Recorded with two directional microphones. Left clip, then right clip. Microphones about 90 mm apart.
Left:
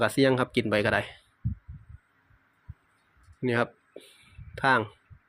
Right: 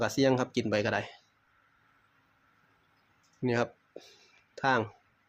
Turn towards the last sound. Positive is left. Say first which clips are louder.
# left 4 dB
turn(degrees=25)  # may be behind; listen again after turning